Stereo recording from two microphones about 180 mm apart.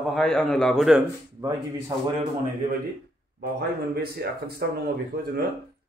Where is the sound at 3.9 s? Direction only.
60° right (ahead or behind).